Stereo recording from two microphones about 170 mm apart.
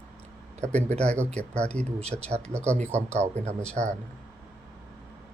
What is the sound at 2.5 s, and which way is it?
Speech, 15° right (ahead or behind).